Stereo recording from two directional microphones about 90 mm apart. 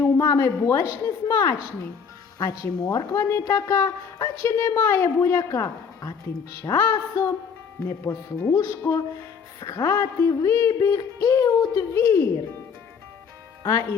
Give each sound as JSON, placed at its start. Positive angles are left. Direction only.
{"t": 0.0, "sound": "a woman's voice", "side_deg": 35}
{"t": 10.2, "sound": "speech", "side_deg": 35}
{"t": 11.9, "sound": "speech", "side_deg": 30}
{"t": 13.6, "sound": "speech", "side_deg": 40}